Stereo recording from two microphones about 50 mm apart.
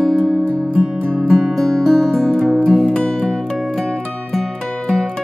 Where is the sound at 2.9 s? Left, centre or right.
Centre.